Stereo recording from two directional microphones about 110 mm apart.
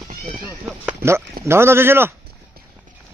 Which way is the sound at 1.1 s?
25° right (ahead or behind).